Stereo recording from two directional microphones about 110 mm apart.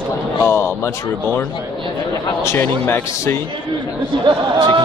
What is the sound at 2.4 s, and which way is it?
Speech, 20° left (ahead or behind).